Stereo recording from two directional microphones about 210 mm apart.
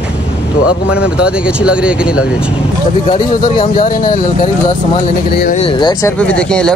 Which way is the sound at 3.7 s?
40° left (ahead or behind).